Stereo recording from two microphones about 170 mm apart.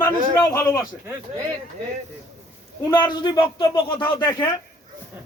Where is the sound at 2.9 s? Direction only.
25° left (ahead or behind).